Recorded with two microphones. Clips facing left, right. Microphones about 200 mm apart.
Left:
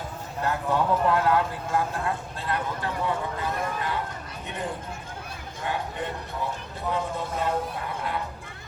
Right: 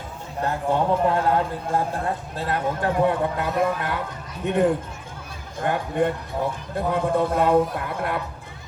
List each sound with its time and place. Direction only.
0.4 s a man's voice: 30° right (ahead or behind)
2.8 s a man's voice: 55° right (ahead or behind)